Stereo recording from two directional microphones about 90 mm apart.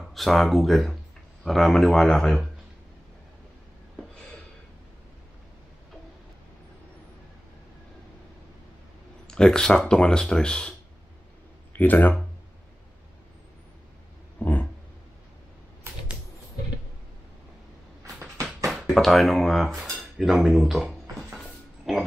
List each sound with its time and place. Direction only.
0.1 s speech: centre (ahead or behind)
9.3 s speech: 10° left (ahead or behind)
11.7 s speech: 20° left (ahead or behind)
14.4 s dog: 20° left (ahead or behind)
18.7 s cutlery: centre (ahead or behind)
21.4 s a sound: 5° right (ahead or behind)